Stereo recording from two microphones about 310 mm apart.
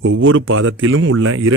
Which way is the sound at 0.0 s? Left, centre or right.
Right.